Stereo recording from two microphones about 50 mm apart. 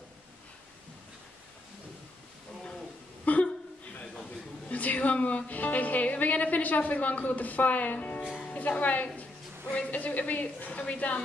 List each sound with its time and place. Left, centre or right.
3.3 s chuckle: left
4.6 s a woman's voice: left